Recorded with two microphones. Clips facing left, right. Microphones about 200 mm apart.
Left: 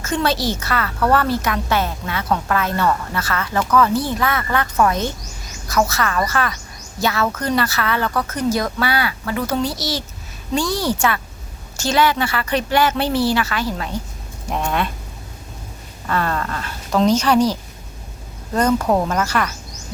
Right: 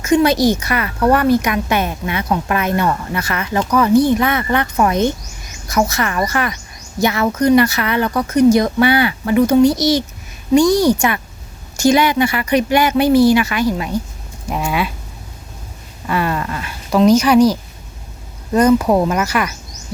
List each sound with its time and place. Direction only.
0.0 s a woman's voice: 15° right (ahead or behind)
16.0 s a sound: 10° right (ahead or behind)
18.5 s a woman's voice: 10° right (ahead or behind)